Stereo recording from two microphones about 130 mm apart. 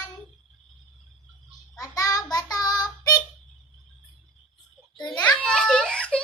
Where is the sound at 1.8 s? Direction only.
30° left (ahead or behind).